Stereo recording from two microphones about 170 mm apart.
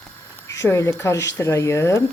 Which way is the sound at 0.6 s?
15° left (ahead or behind).